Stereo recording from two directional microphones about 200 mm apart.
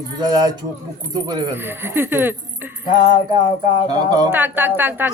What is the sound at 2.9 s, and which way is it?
Speech, 20° right (ahead or behind).